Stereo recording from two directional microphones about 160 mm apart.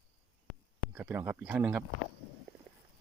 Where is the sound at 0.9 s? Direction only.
10° right (ahead or behind).